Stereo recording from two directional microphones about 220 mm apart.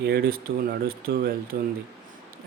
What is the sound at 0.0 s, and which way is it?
Speech, 45° right (ahead or behind).